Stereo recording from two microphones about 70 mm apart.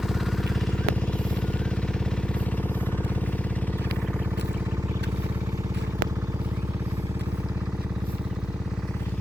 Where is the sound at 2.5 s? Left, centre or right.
Left.